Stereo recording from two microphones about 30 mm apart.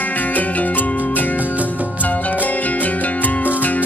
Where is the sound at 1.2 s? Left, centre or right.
Left.